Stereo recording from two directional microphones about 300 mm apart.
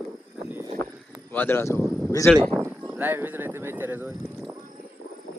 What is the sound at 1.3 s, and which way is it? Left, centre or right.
Speech, centre.